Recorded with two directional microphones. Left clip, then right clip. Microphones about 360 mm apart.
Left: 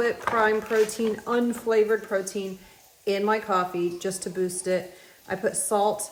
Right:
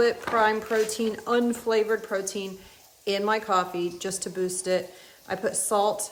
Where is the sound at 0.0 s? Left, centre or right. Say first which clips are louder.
Right 1 dB; centre.